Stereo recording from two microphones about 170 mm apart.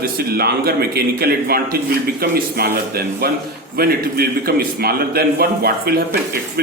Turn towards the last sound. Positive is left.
turn(degrees=-65)  # may be behind; listen again after turning